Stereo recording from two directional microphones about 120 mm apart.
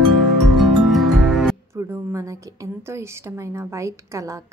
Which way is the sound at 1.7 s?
20° right (ahead or behind).